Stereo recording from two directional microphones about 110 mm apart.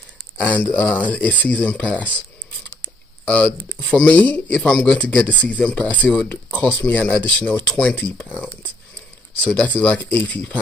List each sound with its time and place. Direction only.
0.4 s speech: 10° left (ahead or behind)
3.3 s speech: 15° left (ahead or behind)